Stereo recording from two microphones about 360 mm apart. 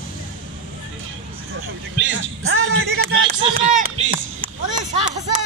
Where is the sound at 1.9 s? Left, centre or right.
Right.